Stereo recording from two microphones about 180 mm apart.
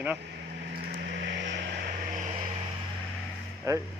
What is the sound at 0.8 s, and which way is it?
Vehicle, 60° right (ahead or behind).